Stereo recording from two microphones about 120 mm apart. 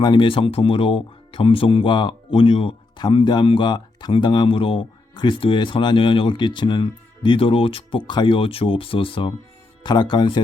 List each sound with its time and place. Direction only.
0.0 s speech: 40° left (ahead or behind)
9.8 s speech: 40° left (ahead or behind)